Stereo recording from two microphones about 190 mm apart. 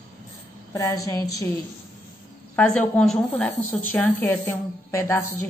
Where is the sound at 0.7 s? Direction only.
15° left (ahead or behind).